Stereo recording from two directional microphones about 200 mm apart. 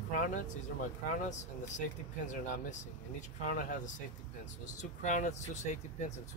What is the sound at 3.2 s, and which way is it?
Speech, 45° left (ahead or behind).